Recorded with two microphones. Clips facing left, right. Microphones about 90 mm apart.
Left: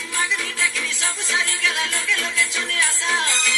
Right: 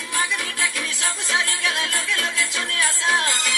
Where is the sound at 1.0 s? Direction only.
50° right (ahead or behind).